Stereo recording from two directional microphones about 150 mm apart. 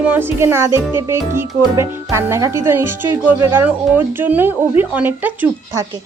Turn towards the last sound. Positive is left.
turn(degrees=-10)  # may be behind; listen again after turning